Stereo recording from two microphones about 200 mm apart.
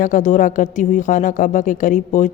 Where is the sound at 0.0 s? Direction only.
40° left (ahead or behind).